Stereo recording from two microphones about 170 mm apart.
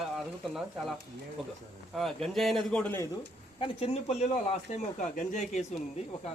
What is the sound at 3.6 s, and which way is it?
Speech, 35° left (ahead or behind).